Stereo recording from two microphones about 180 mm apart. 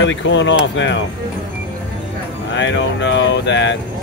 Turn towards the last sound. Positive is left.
turn(degrees=80)